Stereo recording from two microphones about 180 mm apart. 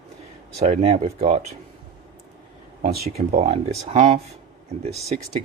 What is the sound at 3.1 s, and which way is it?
Speech, 35° right (ahead or behind).